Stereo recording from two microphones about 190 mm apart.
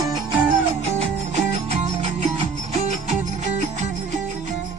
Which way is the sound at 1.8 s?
35° right (ahead or behind).